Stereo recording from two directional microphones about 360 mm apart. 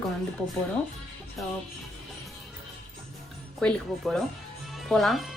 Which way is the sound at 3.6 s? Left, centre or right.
Centre.